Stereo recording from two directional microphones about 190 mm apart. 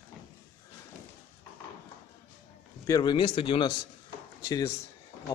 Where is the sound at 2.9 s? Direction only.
20° left (ahead or behind).